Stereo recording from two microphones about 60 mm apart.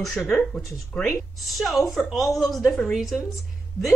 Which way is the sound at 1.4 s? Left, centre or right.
Centre.